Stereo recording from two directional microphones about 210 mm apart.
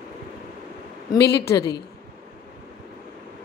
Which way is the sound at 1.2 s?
50° left (ahead or behind).